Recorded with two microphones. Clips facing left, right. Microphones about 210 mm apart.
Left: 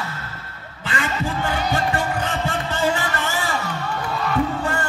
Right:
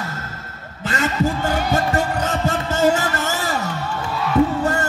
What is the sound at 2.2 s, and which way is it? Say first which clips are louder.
Heart sounds: right 3 dB; 40° right (ahead or behind).